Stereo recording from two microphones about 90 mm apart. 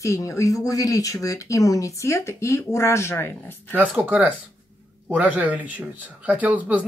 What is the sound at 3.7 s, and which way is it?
Speech, 15° right (ahead or behind).